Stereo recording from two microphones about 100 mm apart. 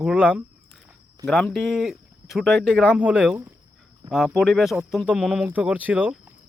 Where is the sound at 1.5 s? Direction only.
Centre (ahead or behind).